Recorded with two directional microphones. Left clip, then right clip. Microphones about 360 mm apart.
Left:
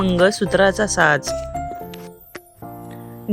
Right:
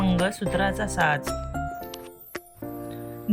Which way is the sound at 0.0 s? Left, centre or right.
Centre.